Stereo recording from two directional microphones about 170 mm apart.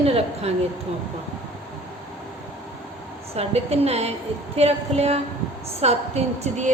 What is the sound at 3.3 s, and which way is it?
A woman's voice, 40° right (ahead or behind).